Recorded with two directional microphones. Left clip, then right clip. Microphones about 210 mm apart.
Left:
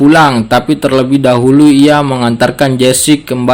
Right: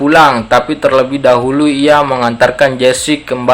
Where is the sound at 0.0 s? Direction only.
50° left (ahead or behind).